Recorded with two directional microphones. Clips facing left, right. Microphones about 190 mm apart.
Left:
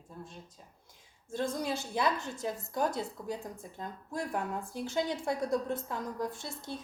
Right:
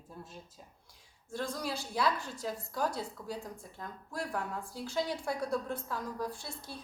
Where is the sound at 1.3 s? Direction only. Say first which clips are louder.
Left 4 dB; 20° left (ahead or behind).